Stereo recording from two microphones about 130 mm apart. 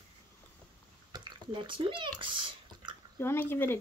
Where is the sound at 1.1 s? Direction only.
35° right (ahead or behind).